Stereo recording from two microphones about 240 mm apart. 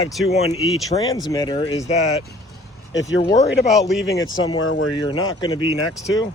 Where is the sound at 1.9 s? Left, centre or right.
Left.